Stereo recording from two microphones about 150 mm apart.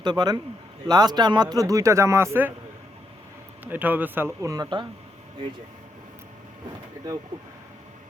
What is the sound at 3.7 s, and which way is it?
Speech, 10° right (ahead or behind).